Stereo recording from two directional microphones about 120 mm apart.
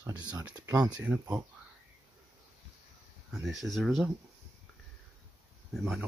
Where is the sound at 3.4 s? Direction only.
Centre (ahead or behind).